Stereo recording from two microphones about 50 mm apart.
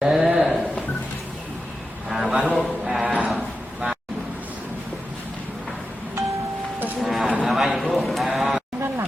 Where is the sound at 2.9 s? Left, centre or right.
Centre.